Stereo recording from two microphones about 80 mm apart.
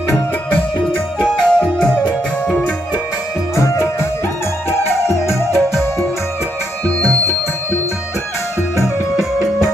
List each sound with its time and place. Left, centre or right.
1.2 s music: centre
3.5 s music: left